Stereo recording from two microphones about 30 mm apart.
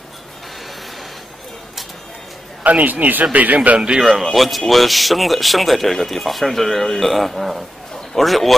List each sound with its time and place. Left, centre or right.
2.6 s a man's voice: right
3.3 s a man's voice: right
4.0 s a man's voice: centre